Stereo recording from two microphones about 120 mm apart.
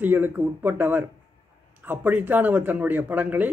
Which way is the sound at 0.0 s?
15° right (ahead or behind).